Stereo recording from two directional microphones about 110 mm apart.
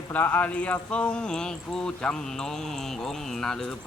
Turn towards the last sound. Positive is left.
turn(degrees=5)  # may be behind; listen again after turning